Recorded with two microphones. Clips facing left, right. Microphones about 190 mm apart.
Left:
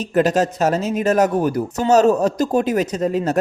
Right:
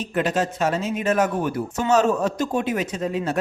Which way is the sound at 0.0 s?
40° left (ahead or behind).